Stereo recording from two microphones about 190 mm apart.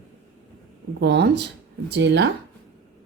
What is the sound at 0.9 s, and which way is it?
Speech, 65° right (ahead or behind).